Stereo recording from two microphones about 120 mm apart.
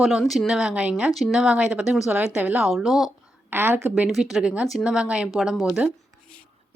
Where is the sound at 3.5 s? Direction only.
15° right (ahead or behind).